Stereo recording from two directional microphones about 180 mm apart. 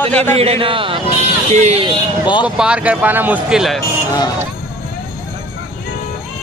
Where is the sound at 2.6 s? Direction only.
5° right (ahead or behind).